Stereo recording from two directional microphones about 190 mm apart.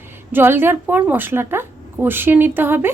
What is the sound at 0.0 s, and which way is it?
Speech, 10° right (ahead or behind).